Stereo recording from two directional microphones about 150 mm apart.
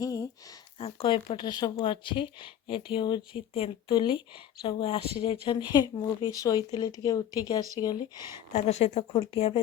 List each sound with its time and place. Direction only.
0.0 s a sound: 25° left (ahead or behind)
0.8 s speech: 40° left (ahead or behind)
8.5 s a woman's voice: 50° left (ahead or behind)